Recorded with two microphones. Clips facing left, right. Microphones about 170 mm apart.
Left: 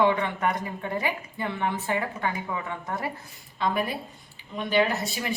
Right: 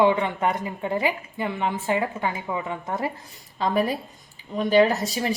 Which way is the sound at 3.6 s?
35° right (ahead or behind).